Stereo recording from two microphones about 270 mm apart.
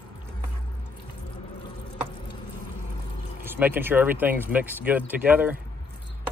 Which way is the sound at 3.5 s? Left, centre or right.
Centre.